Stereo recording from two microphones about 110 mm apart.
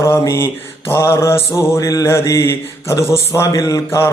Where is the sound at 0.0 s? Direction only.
25° left (ahead or behind).